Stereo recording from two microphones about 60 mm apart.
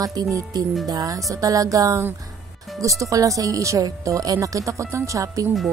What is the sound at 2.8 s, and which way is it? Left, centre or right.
Speech, right.